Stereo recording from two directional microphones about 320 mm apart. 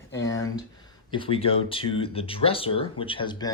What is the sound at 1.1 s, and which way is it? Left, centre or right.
Speech, centre.